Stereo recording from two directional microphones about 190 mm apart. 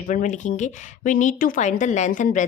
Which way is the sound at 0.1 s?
40° left (ahead or behind).